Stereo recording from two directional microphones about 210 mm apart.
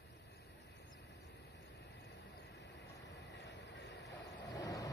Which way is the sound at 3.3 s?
55° left (ahead or behind).